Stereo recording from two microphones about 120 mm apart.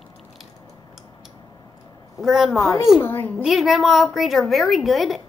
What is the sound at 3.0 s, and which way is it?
Speech, 20° left (ahead or behind).